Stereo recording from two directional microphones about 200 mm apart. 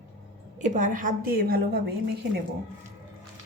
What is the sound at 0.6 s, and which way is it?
A woman's voice, 40° right (ahead or behind).